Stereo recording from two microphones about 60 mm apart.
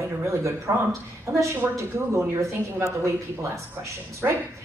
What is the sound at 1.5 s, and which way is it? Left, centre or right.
Speech, right.